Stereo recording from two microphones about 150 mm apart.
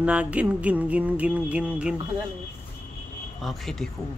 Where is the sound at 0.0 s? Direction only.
10° right (ahead or behind).